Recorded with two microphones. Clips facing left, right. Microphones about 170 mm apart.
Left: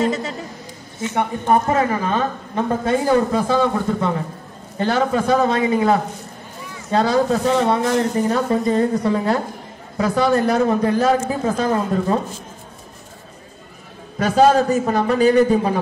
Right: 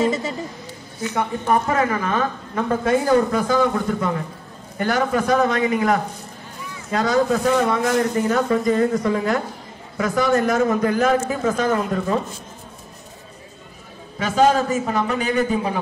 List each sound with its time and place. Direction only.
0.0 s a man's voice: centre (ahead or behind)
1.0 s a woman's voice: 25° left (ahead or behind)
14.1 s a man's voice: 40° left (ahead or behind)